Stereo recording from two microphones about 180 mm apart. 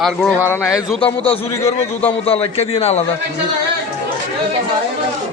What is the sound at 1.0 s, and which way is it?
Speech, 30° left (ahead or behind).